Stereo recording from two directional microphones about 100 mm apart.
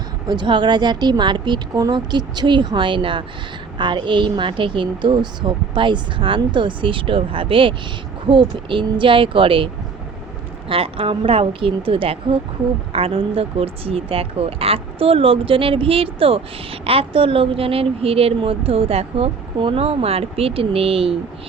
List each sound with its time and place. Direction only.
0.3 s a woman's voice: 50° right (ahead or behind)
10.7 s speech: 65° right (ahead or behind)